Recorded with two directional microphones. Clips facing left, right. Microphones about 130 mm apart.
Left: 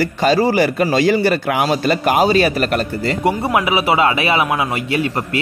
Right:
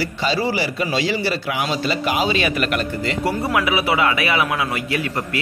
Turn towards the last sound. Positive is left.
turn(degrees=25)  # may be behind; listen again after turning